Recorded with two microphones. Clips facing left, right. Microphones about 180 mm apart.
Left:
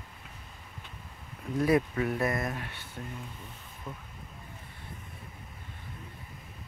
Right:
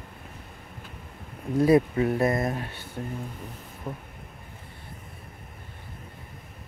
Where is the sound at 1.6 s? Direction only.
30° right (ahead or behind).